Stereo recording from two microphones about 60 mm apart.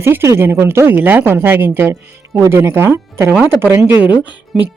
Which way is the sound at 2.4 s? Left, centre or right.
Right.